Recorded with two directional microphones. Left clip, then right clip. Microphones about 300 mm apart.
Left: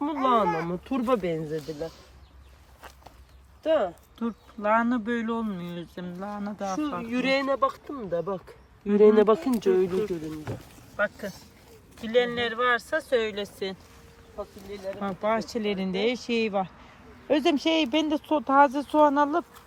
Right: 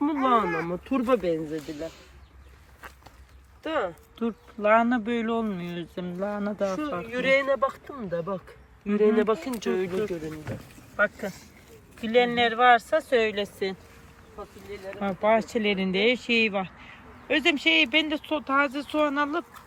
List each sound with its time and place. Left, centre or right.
0.0 s speech: left
4.2 s speech: centre
7.1 s speech: centre
10.9 s speech: centre
14.7 s speech: left
15.0 s speech: centre